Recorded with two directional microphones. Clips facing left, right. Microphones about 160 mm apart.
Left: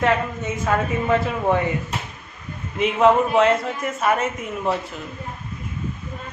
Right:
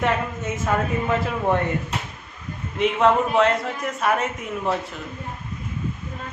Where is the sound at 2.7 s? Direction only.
Centre (ahead or behind).